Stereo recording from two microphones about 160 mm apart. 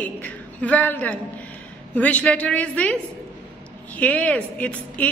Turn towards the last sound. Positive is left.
turn(degrees=10)  # may be behind; listen again after turning